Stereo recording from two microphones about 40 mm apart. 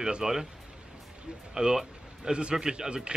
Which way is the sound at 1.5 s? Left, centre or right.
Centre.